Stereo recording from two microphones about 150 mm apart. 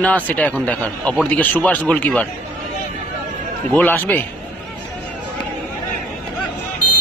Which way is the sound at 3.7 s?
10° left (ahead or behind).